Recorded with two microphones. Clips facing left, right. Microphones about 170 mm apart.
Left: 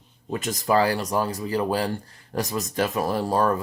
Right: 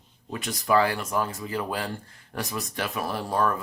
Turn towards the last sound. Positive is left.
turn(degrees=40)  # may be behind; listen again after turning